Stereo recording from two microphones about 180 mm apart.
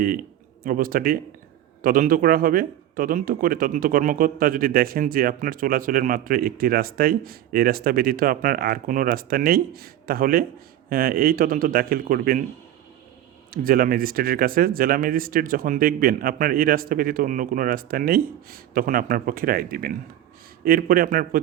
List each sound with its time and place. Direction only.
0.0 s speech: 55° right (ahead or behind)
13.5 s speech: 55° right (ahead or behind)